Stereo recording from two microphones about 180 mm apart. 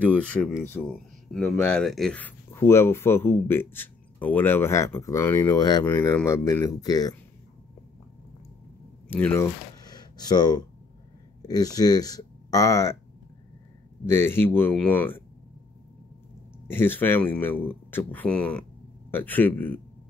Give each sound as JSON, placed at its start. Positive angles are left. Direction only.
{"t": 0.0, "sound": "speech", "side_deg": 10}
{"t": 9.1, "sound": "speech", "side_deg": 10}
{"t": 14.0, "sound": "speech", "side_deg": 15}
{"t": 16.6, "sound": "speech", "side_deg": 10}